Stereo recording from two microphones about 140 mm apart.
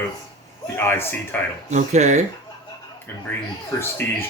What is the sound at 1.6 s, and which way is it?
Speech, 55° right (ahead or behind).